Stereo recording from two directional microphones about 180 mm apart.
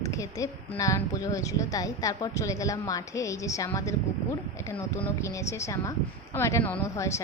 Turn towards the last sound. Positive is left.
turn(degrees=15)  # may be behind; listen again after turning